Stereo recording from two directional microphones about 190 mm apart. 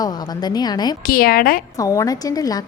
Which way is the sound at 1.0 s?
50° left (ahead or behind).